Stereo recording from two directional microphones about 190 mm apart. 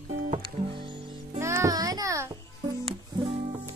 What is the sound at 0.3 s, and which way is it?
Music, 30° right (ahead or behind).